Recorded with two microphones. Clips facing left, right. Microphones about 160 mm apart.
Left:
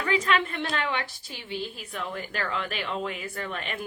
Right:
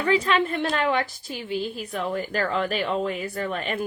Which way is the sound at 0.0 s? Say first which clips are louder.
Right 4 dB; 35° right (ahead or behind).